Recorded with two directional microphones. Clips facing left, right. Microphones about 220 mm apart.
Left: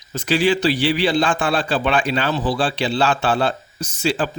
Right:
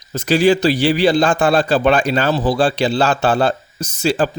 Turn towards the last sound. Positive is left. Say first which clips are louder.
# right 4 dB
turn(degrees=-40)  # may be behind; listen again after turning